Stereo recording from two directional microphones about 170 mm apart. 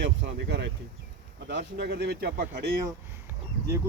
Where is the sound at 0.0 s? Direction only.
90° right; by 2.7 s 70° right (ahead or behind).